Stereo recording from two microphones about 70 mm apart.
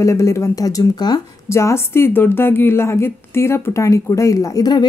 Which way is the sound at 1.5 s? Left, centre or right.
Left.